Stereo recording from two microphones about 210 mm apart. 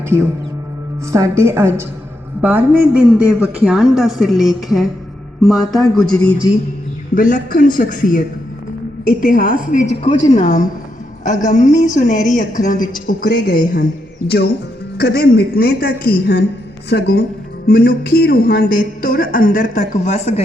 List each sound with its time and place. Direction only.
1.1 s a woman's voice: 15° right (ahead or behind); by 6.3 s 5° left (ahead or behind)
7.1 s speech: 40° left (ahead or behind)
10.0 s a woman's voice: 25° left (ahead or behind)
10.4 s a woman's voice: 35° left (ahead or behind)